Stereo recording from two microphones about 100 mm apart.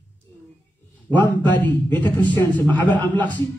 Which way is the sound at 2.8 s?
50° right (ahead or behind).